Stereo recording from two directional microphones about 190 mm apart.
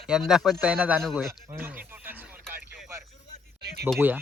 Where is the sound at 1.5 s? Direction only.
10° right (ahead or behind).